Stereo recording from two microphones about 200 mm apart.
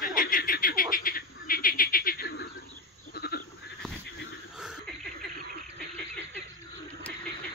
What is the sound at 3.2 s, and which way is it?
Goat, 50° left (ahead or behind).